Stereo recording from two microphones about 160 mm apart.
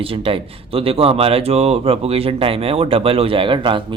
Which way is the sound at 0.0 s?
35° right (ahead or behind).